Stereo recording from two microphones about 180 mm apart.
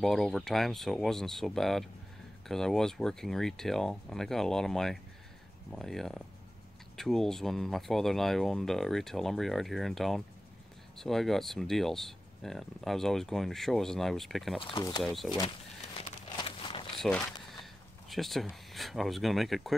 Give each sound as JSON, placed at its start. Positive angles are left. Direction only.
{"t": 0.0, "sound": "speech", "side_deg": 0}
{"t": 14.6, "sound": "speech", "side_deg": 30}
{"t": 15.0, "sound": "speech", "side_deg": 0}
{"t": 16.0, "sound": "a sound", "side_deg": 30}
{"t": 17.0, "sound": "speech", "side_deg": 0}